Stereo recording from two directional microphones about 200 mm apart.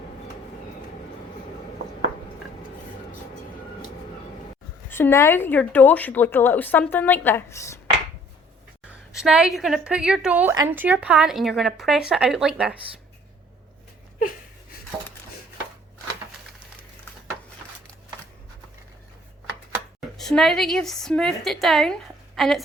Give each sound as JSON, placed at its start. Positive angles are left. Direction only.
{"t": 4.9, "sound": "speech", "side_deg": 10}
{"t": 9.2, "sound": "a woman's voice", "side_deg": -5}
{"t": 14.2, "sound": "a sound", "side_deg": 45}
{"t": 20.1, "sound": "a woman's voice", "side_deg": 0}